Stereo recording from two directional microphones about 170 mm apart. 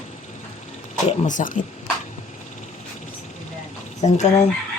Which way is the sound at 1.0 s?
40° left (ahead or behind).